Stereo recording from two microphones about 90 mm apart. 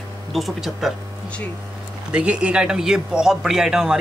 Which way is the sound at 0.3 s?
Centre (ahead or behind).